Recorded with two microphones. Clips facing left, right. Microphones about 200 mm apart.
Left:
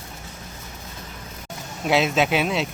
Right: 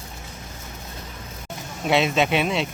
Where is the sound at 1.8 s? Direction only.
Centre (ahead or behind).